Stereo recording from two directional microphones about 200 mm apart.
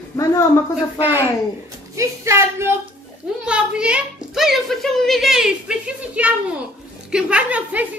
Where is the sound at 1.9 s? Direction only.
15° right (ahead or behind).